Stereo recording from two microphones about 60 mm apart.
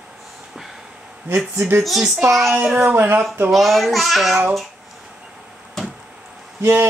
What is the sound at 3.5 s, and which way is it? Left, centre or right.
Speech, centre.